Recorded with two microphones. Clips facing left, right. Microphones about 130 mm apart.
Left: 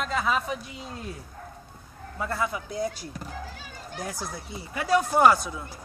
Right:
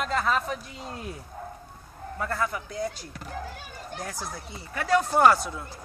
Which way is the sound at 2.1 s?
15° left (ahead or behind).